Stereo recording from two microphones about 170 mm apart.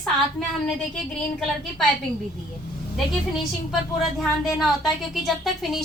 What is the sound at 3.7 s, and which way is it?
Speech, centre (ahead or behind).